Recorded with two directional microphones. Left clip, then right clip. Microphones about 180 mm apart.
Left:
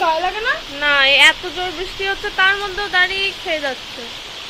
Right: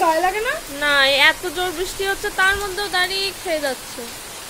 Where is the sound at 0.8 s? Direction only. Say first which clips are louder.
Left 3 dB; 20° right (ahead or behind).